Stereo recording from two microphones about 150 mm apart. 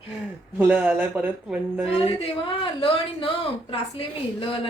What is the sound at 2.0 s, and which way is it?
A woman's voice, 35° left (ahead or behind).